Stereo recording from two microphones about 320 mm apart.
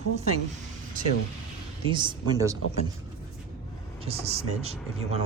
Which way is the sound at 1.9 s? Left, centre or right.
Centre.